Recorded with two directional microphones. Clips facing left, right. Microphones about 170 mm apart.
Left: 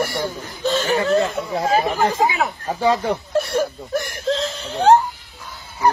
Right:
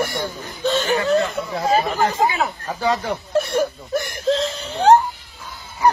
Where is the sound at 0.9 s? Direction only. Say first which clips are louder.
Left 1 dB; 35° left (ahead or behind).